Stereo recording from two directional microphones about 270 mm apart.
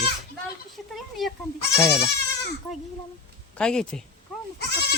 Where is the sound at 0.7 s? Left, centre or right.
Centre.